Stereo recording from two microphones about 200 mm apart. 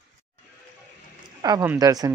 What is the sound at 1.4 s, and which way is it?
Speech, 15° right (ahead or behind).